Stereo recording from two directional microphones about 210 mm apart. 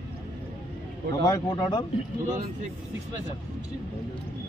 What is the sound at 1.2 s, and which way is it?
Speech, 20° left (ahead or behind).